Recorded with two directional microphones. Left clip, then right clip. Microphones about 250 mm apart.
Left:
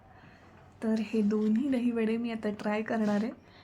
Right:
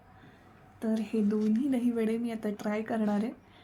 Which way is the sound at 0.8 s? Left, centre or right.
Centre.